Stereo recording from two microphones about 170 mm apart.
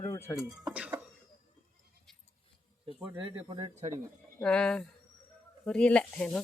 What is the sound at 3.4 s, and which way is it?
Speech, 25° right (ahead or behind).